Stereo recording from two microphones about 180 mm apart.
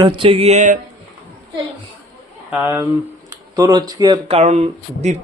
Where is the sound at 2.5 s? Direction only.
10° right (ahead or behind).